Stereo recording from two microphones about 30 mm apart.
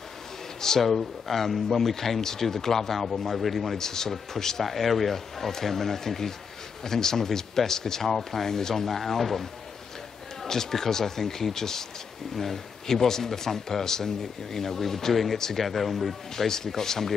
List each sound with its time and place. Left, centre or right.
0.6 s speech: centre
3.8 s speech: centre
4.6 s speech: centre
8.8 s speech: centre
15.6 s speech: centre